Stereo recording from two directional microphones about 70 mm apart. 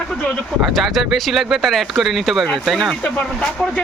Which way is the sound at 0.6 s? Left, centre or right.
Centre.